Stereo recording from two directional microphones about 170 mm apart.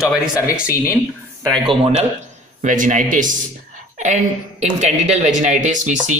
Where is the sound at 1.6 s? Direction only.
35° right (ahead or behind).